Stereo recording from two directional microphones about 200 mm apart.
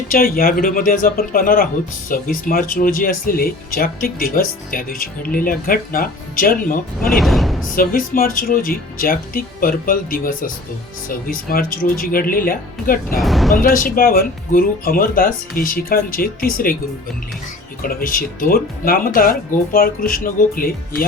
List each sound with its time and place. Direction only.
0.1 s speech: 45° left (ahead or behind)
7.1 s speech: centre (ahead or behind)
7.8 s speech: 45° left (ahead or behind)
13.1 s speech: centre (ahead or behind)
13.6 s speech: 45° left (ahead or behind)
17.8 s speech: 45° left (ahead or behind)